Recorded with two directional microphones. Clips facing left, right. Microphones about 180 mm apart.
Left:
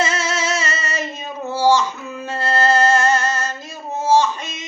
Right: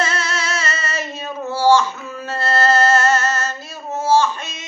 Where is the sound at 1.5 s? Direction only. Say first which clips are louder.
Right 1 dB; 15° left (ahead or behind).